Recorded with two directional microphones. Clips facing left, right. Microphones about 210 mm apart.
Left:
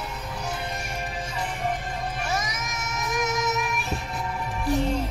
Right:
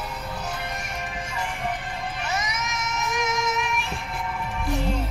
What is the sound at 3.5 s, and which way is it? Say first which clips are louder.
Music: even; 40° left (ahead or behind).